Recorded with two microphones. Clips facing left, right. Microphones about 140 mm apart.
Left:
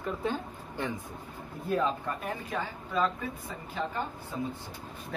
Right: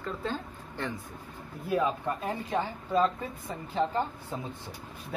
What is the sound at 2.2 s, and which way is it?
A man's voice, 30° right (ahead or behind).